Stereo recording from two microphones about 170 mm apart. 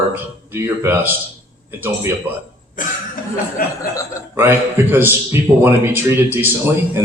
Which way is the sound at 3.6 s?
60° left (ahead or behind).